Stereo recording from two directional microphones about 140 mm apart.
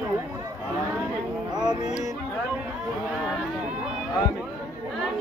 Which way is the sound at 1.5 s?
30° right (ahead or behind).